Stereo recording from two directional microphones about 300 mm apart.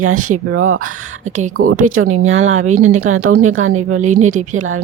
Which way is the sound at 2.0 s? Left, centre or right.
Right.